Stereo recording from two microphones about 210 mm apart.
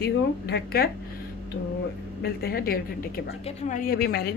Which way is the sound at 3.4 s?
35° left (ahead or behind).